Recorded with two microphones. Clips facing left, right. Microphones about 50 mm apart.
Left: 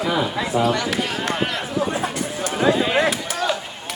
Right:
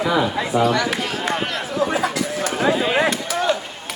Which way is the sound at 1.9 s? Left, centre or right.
Right.